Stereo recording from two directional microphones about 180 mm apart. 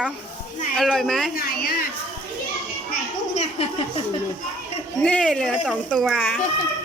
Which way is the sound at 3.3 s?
35° left (ahead or behind).